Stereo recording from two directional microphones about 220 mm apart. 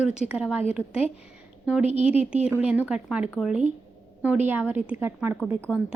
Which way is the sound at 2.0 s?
25° left (ahead or behind).